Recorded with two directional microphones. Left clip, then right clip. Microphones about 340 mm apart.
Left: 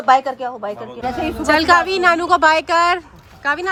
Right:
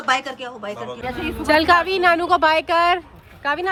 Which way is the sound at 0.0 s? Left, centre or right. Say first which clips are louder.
Left 7 dB; centre.